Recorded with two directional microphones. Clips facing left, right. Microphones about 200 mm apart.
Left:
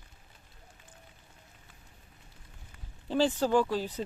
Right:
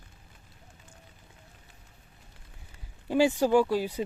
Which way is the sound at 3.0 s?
10° right (ahead or behind).